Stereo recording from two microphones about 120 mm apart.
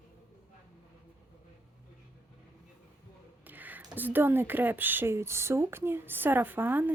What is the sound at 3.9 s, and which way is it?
Speech, 15° right (ahead or behind).